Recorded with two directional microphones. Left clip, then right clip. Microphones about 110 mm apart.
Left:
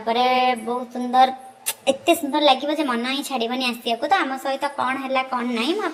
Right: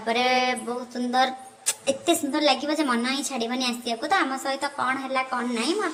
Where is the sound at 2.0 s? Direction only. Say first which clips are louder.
Left 5 dB; 5° left (ahead or behind).